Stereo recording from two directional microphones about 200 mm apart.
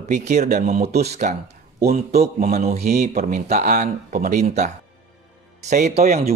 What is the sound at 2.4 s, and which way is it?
Speech, 35° right (ahead or behind).